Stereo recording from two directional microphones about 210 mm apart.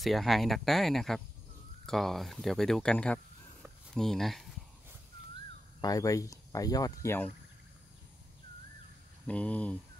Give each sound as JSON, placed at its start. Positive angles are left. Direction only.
{"t": 0.0, "sound": "speech", "side_deg": 0}
{"t": 5.8, "sound": "speech", "side_deg": 15}
{"t": 9.3, "sound": "speech", "side_deg": 5}